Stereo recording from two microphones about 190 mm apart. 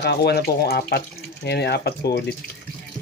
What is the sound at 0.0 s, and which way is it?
Speech, 60° left (ahead or behind).